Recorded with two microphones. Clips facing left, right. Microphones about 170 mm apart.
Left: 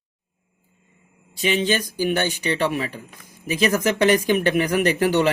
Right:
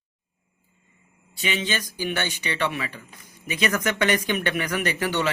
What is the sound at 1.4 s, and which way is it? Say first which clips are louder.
Speech: left 7 dB; 45° left (ahead or behind).